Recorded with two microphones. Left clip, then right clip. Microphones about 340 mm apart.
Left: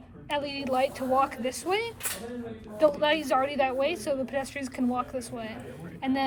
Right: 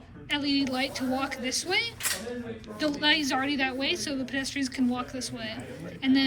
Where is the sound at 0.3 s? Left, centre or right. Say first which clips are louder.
Left 1 dB; centre.